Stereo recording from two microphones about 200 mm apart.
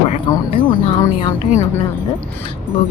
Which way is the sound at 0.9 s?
15° left (ahead or behind).